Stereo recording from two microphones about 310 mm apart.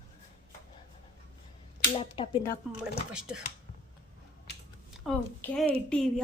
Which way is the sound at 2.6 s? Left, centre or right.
Centre.